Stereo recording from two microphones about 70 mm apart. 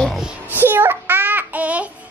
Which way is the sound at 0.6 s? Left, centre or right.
Right.